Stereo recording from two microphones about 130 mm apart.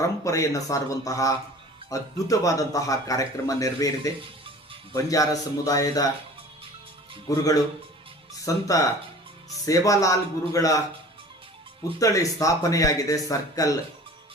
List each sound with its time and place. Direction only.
0.0 s a man's voice: 25° left (ahead or behind)
4.2 s music: 45° right (ahead or behind)
4.9 s a man's voice: 25° left (ahead or behind)
7.3 s a man's voice: 25° left (ahead or behind)
11.9 s a man's voice: 25° left (ahead or behind)